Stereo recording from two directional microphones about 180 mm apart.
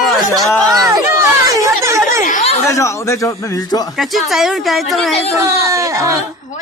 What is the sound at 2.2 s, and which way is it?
Chatter, 40° left (ahead or behind).